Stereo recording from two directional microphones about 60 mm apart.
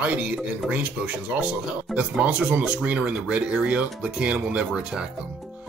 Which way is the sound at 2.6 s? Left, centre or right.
Centre.